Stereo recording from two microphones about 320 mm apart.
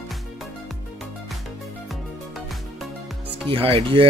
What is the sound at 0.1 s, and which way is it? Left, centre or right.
Music, centre.